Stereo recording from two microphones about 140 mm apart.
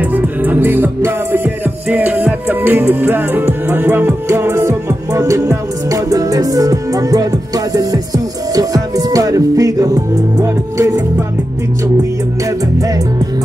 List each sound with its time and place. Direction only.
0.0 s music: 10° right (ahead or behind)
12.4 s music: 25° right (ahead or behind)